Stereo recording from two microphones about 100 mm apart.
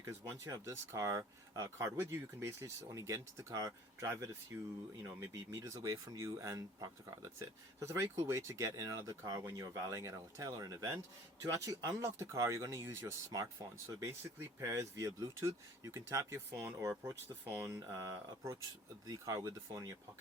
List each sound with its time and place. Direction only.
0.0 s speech: 30° right (ahead or behind)